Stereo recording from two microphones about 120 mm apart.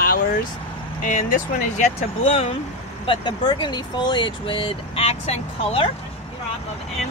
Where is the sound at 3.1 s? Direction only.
45° left (ahead or behind).